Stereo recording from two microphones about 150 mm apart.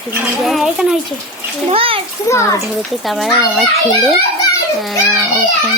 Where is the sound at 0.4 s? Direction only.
Centre (ahead or behind).